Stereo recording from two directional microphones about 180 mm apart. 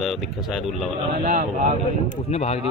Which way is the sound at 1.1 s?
50° right (ahead or behind).